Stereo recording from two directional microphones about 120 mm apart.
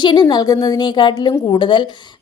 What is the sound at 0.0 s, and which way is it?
A woman's voice, 40° left (ahead or behind).